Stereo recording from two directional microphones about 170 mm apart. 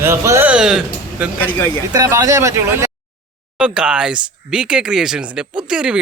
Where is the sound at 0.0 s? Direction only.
15° right (ahead or behind).